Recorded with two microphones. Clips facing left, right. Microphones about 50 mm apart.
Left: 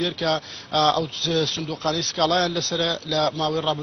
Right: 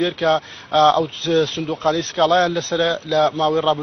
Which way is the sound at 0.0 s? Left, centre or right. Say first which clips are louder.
Right 6 dB; right.